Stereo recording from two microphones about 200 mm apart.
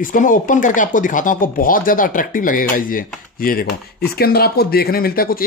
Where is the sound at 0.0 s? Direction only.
40° left (ahead or behind).